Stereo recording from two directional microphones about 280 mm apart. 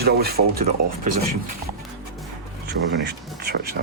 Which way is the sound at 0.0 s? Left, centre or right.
Right.